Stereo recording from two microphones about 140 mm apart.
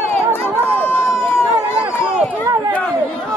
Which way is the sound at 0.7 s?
15° left (ahead or behind).